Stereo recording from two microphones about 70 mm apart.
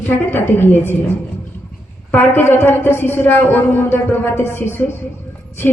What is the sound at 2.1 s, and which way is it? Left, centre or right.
A woman's voice, left.